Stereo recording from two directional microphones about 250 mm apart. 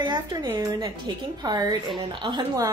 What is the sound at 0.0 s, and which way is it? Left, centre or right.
A woman's voice, centre.